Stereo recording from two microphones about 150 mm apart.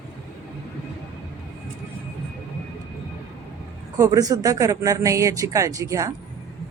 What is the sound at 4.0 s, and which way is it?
Speech, 20° right (ahead or behind).